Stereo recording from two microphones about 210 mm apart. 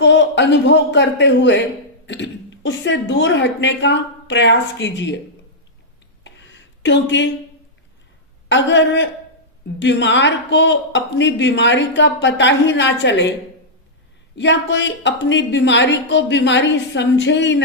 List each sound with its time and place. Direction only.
0.0 s speech: 55° left (ahead or behind)
6.2 s a sound: 60° left (ahead or behind)
8.4 s speech: 60° left (ahead or behind)
14.3 s speech: 60° left (ahead or behind)